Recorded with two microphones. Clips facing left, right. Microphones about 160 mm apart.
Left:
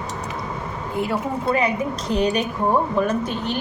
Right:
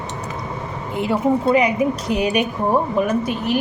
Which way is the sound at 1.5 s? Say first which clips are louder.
Right 5 dB; 15° right (ahead or behind).